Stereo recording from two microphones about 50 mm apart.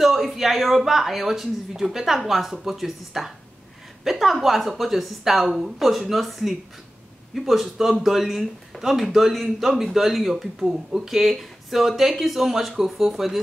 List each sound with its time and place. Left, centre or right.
0.0 s speech: centre